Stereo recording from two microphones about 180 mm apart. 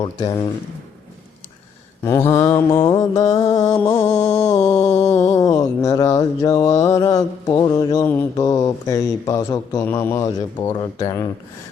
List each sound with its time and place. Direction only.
0.0 s mantra: 20° left (ahead or behind)
2.0 s mantra: 15° left (ahead or behind)